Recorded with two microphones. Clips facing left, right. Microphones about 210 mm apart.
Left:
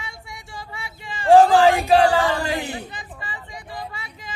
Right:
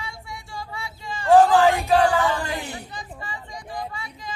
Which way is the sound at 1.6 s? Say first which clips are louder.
Left 3 dB; 70° left (ahead or behind).